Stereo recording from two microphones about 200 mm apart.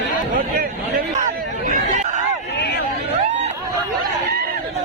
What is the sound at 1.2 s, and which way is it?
Hubbub, 40° right (ahead or behind).